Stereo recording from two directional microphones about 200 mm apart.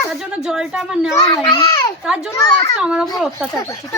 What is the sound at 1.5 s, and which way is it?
Speech, 15° left (ahead or behind).